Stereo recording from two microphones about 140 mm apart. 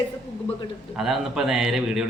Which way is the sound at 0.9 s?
5° right (ahead or behind).